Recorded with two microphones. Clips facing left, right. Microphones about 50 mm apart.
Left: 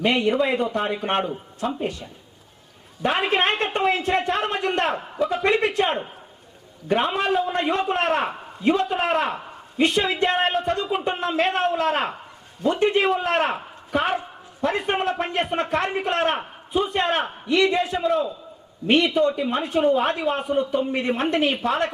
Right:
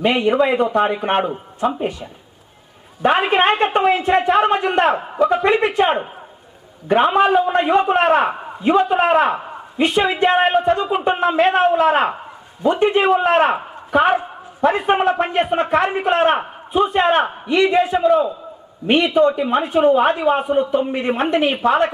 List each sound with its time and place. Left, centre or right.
0.0 s a man's voice: centre
1.6 s a man's voice: centre
8.3 s a sound: right
8.6 s a man's voice: centre
17.6 s a man's voice: centre